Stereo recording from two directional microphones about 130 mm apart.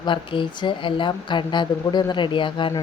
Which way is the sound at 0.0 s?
40° left (ahead or behind).